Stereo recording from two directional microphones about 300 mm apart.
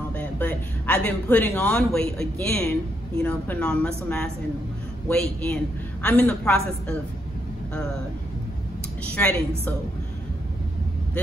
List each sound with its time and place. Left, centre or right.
0.1 s a man's voice: centre
9.1 s speech: centre